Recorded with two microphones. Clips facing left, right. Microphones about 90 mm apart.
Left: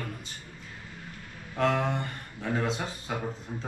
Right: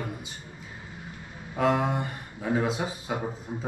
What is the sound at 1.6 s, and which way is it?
Speech, 10° right (ahead or behind).